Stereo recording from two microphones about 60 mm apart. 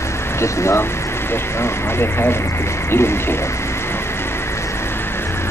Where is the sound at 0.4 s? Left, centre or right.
Left.